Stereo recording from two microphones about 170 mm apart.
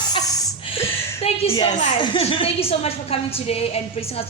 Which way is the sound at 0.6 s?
35° left (ahead or behind).